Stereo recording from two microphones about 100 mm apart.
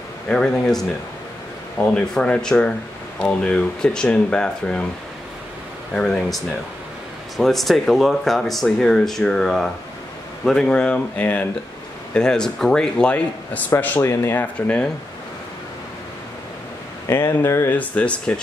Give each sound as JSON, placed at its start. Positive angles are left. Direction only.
{"t": 0.3, "sound": "speech", "side_deg": 5}
{"t": 5.9, "sound": "speech", "side_deg": 5}
{"t": 17.1, "sound": "speech", "side_deg": 25}
{"t": 17.7, "sound": "speech", "side_deg": 15}